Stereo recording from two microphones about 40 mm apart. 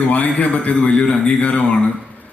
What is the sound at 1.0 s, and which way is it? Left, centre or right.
Speech, left.